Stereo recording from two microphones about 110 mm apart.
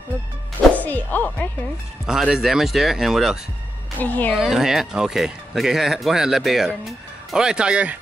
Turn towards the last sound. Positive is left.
turn(degrees=-10)  # may be behind; listen again after turning